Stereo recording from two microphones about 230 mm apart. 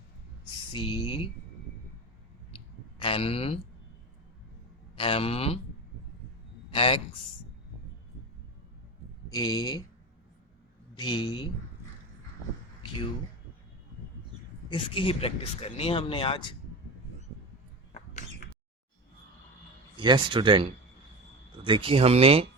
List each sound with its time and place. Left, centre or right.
0.7 s speech: centre
3.0 s speech: left
4.9 s speech: left
6.7 s a man's voice: left
9.3 s speech: centre
10.9 s speech: centre
14.7 s speech: left
20.0 s speech: centre